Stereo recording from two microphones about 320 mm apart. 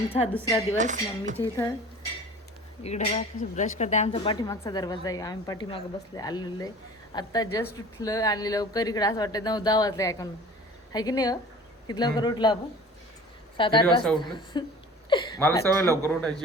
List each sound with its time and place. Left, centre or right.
0.3 s speech: centre
0.8 s speech: right
1.4 s speech: centre
2.8 s speech: left
13.6 s speech: centre